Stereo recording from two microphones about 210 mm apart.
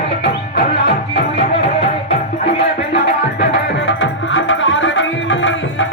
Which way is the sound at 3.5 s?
60° left (ahead or behind).